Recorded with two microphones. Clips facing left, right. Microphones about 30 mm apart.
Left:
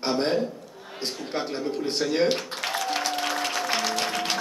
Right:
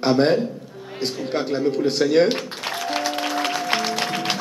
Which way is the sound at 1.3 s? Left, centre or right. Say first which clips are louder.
Right 7 dB; right.